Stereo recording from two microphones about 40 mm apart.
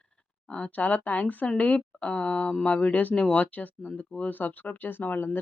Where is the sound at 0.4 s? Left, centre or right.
Left.